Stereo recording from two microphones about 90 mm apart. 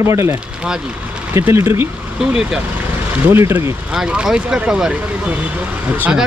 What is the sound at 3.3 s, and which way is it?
Speech, 25° right (ahead or behind).